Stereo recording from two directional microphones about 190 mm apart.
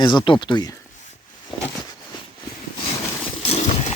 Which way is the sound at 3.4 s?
30° left (ahead or behind).